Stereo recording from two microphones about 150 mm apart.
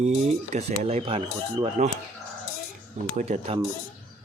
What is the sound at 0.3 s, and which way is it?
Speech, 50° right (ahead or behind).